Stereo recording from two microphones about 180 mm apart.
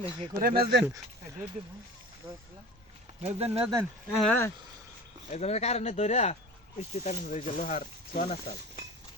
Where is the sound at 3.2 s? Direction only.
35° right (ahead or behind).